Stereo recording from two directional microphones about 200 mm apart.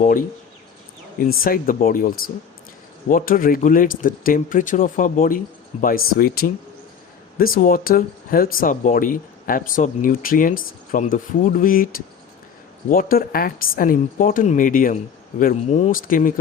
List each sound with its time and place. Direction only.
1.4 s speech: 45° left (ahead or behind)
12.9 s speech: 45° left (ahead or behind)